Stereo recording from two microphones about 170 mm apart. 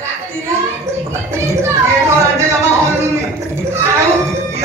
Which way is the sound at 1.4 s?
15° right (ahead or behind).